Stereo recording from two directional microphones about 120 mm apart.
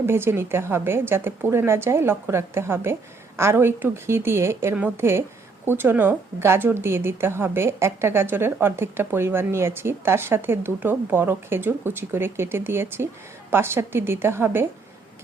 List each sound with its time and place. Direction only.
0.0 s a woman's voice: 20° right (ahead or behind)